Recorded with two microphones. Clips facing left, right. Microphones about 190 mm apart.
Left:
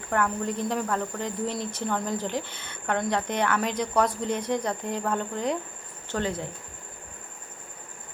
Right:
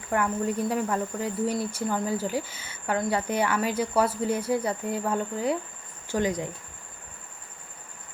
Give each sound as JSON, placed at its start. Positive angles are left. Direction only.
{"t": 0.1, "sound": "speech", "side_deg": -10}